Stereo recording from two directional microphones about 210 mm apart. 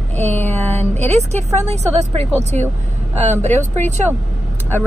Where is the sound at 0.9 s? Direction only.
30° right (ahead or behind).